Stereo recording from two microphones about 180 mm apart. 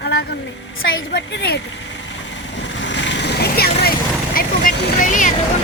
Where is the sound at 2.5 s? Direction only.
85° left.